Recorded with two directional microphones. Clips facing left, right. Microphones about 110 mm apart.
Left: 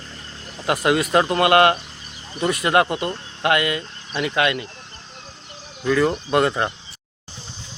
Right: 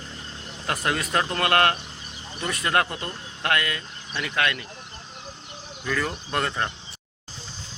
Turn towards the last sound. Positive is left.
turn(degrees=15)  # may be behind; listen again after turning